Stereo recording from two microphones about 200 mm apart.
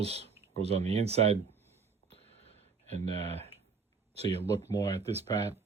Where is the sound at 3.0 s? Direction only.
30° right (ahead or behind).